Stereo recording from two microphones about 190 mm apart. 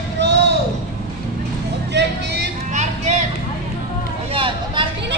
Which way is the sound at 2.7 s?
35° right (ahead or behind).